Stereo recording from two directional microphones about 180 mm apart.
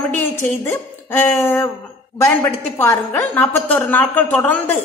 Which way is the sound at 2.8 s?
10° left (ahead or behind).